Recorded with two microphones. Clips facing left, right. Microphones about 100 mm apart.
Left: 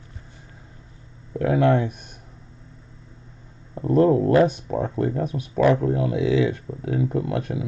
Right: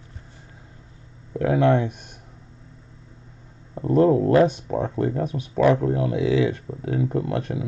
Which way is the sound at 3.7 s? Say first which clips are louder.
Even; 25° right (ahead or behind).